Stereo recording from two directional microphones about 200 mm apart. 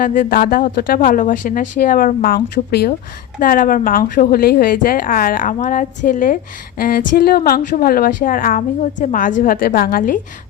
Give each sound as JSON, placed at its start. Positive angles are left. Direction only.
{"t": 0.0, "sound": "a woman's voice", "side_deg": 45}